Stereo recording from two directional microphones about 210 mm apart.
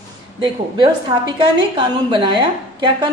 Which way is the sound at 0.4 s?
20° right (ahead or behind).